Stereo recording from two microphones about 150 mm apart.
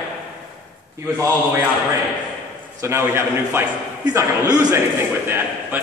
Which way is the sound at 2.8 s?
15° right (ahead or behind).